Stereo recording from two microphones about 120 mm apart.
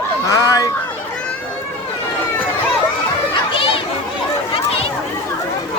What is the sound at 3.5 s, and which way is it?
Children playing, 45° left (ahead or behind).